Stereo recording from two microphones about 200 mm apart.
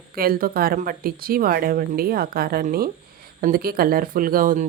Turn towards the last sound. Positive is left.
turn(degrees=-40)  # may be behind; listen again after turning